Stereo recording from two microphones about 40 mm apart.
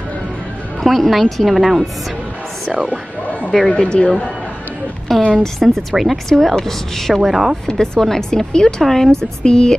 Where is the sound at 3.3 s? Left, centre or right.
Left.